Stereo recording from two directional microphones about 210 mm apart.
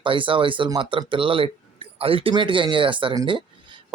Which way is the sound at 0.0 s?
25° right (ahead or behind).